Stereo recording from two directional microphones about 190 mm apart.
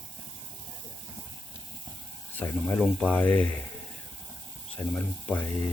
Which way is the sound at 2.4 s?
5° left (ahead or behind).